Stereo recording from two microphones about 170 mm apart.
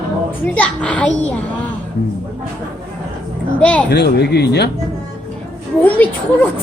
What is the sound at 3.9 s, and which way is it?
Speech, 75° left (ahead or behind).